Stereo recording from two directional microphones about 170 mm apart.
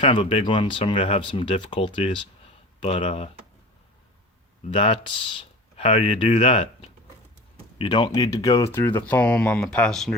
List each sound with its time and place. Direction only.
0.0 s speech: 30° left (ahead or behind)
4.7 s speech: 35° left (ahead or behind); by 10.2 s centre (ahead or behind)